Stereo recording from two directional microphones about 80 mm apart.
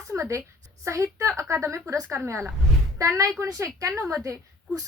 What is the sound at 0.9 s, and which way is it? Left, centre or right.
A woman's voice, right.